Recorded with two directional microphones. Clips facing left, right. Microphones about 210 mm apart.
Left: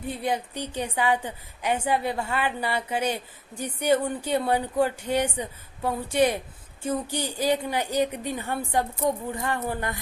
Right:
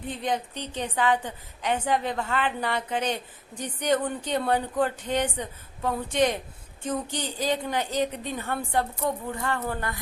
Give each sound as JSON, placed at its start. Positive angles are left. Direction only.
{"t": 0.1, "sound": "a woman's voice", "side_deg": 10}